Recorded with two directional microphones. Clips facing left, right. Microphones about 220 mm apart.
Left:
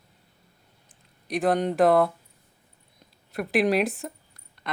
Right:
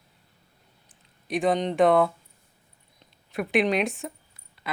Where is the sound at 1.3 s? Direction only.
Centre (ahead or behind).